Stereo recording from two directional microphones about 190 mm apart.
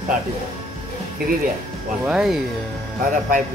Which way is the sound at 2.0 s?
5° right (ahead or behind).